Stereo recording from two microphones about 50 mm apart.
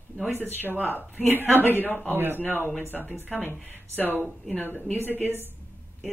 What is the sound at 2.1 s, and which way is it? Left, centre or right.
A woman's voice, right.